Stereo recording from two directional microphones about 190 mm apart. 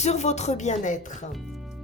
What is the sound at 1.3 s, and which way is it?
Speech, centre (ahead or behind).